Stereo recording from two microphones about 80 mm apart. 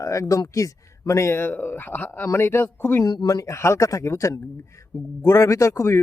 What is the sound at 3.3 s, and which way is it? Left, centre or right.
A man's voice, left.